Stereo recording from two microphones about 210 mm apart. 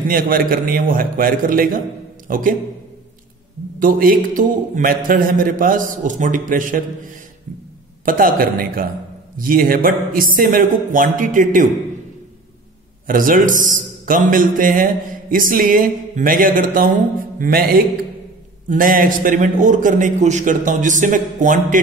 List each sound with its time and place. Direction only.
0.1 s a man's voice: 45° right (ahead or behind)
3.8 s a man's voice: 40° right (ahead or behind)
8.0 s a man's voice: 40° right (ahead or behind)
13.0 s a man's voice: 40° right (ahead or behind)